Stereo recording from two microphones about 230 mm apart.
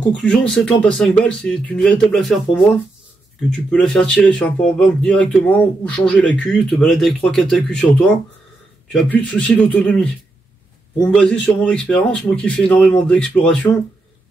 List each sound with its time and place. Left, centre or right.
0.2 s speech: centre
3.7 s speech: centre
8.9 s speech: centre